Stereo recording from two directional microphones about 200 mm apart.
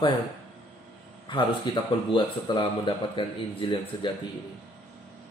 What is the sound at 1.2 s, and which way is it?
Speech, 25° left (ahead or behind).